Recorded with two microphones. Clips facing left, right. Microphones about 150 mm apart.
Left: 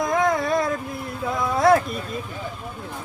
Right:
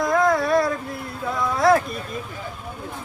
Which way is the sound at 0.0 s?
20° left (ahead or behind).